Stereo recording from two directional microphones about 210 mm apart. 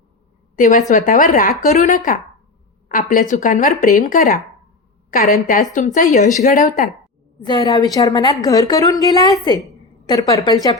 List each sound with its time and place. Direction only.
0.5 s speech: 40° left (ahead or behind)
7.4 s a woman's voice: 20° left (ahead or behind)